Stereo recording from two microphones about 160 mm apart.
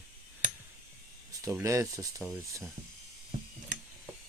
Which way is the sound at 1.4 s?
15° right (ahead or behind).